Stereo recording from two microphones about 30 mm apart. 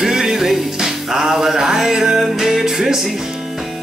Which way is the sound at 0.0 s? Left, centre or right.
Centre.